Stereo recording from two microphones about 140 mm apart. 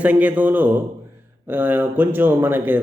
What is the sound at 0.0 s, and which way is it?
A man's voice, 10° right (ahead or behind).